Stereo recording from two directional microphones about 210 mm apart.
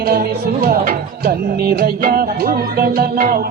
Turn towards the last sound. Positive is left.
turn(degrees=-45)  # may be behind; listen again after turning